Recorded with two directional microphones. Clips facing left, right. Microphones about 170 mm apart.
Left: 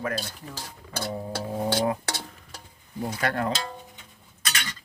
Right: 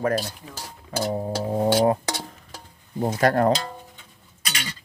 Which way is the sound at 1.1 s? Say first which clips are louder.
Right 5 dB; 40° right (ahead or behind).